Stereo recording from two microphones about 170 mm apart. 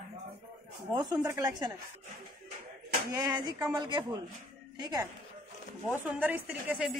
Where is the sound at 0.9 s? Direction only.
25° right (ahead or behind).